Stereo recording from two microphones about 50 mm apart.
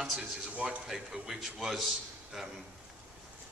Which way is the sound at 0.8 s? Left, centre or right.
Centre.